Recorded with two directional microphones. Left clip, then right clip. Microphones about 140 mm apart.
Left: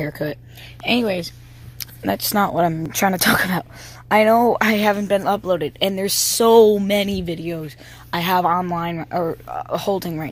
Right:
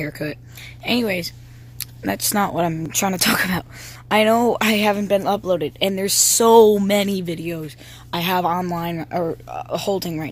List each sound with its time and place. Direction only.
0.0 s speech: 5° right (ahead or behind)